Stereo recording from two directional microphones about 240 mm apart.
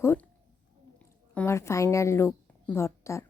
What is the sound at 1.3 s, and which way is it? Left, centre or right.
A woman's voice, centre.